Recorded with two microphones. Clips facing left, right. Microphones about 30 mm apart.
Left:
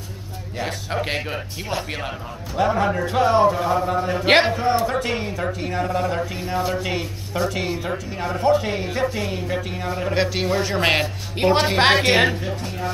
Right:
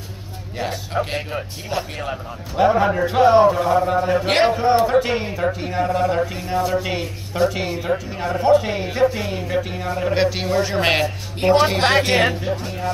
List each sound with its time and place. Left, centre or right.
0.6 s speech: centre
2.5 s a man's voice: centre
6.4 s speech: centre
11.4 s a woman's voice: centre
12.3 s speech: centre